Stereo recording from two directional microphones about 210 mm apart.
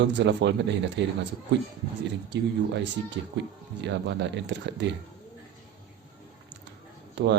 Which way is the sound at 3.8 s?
55° right (ahead or behind).